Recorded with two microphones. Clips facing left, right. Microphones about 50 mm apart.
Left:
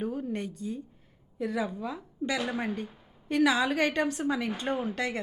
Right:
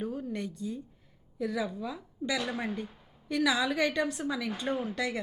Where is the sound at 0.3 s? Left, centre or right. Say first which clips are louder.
Left 1 dB; left; by 2.7 s centre.